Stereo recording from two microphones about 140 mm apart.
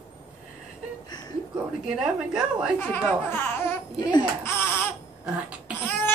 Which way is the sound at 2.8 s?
10° left (ahead or behind).